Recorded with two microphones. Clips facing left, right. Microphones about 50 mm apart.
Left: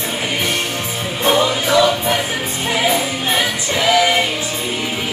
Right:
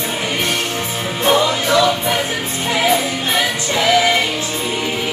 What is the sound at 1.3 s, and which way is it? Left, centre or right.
Music, centre.